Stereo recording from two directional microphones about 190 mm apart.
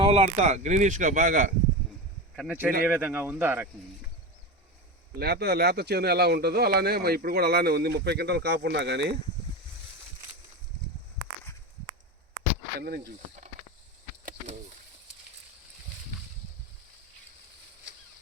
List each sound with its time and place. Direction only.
0.0 s speech: 30° right (ahead or behind)
2.3 s speech: 5° right (ahead or behind)
5.2 s speech: 55° right (ahead or behind)
14.3 s a sound: 40° right (ahead or behind)